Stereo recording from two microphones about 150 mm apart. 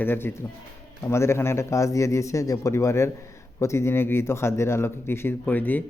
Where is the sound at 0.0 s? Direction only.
15° left (ahead or behind).